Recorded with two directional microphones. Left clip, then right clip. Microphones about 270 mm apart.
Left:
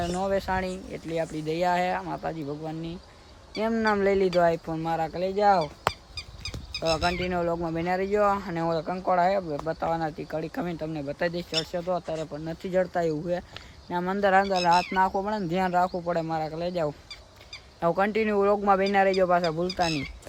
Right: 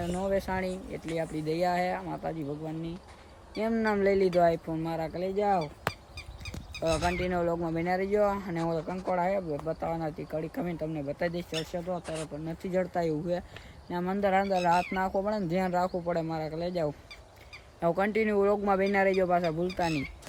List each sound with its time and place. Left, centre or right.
0.0 s speech: centre
5.6 s a sound: left
6.8 s speech: centre